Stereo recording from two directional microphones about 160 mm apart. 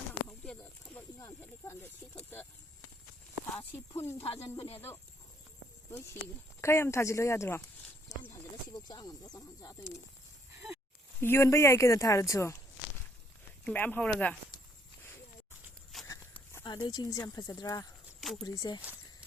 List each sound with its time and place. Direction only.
0.3 s a sound: 5° left (ahead or behind)
1.2 s speech: 20° left (ahead or behind)
4.2 s speech: 35° left (ahead or behind)
5.9 s speech: 15° left (ahead or behind)
8.1 s horse: 20° left (ahead or behind)
8.7 s speech: 25° left (ahead or behind)
11.2 s speech: 15° left (ahead or behind)
13.7 s speech: 10° left (ahead or behind)
15.9 s walk: centre (ahead or behind)
16.6 s speech: 25° left (ahead or behind)
18.2 s a sound: centre (ahead or behind)
18.4 s speech: 25° left (ahead or behind)